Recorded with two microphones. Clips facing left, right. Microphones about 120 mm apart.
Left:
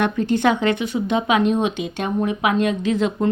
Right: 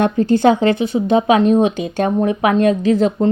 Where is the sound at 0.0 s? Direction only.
35° right (ahead or behind).